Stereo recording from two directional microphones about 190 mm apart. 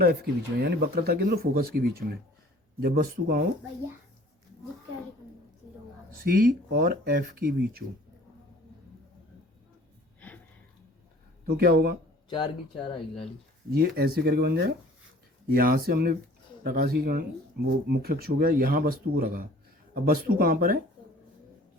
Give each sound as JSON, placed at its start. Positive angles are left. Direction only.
{"t": 0.0, "sound": "speech", "side_deg": -55}
{"t": 6.2, "sound": "speech", "side_deg": -50}
{"t": 10.2, "sound": "a sound", "side_deg": 10}
{"t": 11.4, "sound": "speech", "side_deg": -55}
{"t": 12.9, "sound": "speech", "side_deg": 30}
{"t": 13.7, "sound": "speech", "side_deg": -55}